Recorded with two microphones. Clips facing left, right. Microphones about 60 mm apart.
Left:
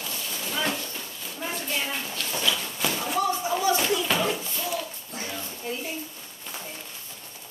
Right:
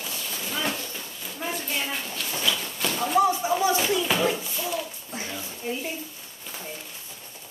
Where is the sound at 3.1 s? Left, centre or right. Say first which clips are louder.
Right 6 dB; right.